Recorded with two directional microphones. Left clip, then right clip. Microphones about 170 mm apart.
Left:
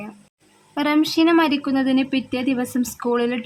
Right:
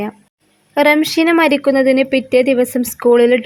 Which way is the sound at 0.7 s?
30° right (ahead or behind).